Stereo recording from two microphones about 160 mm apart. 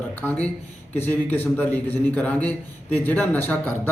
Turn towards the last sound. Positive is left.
turn(degrees=10)  # may be behind; listen again after turning